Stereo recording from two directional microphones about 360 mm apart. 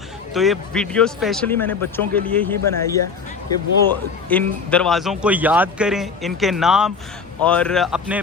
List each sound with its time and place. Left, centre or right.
0.3 s a man's voice: centre
4.3 s a man's voice: centre